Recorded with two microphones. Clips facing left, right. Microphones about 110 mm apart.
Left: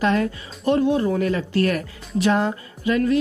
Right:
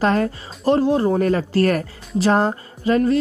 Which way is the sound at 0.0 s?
40° right (ahead or behind).